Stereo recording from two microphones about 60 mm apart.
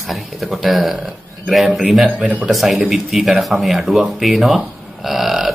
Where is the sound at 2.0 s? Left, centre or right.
Right.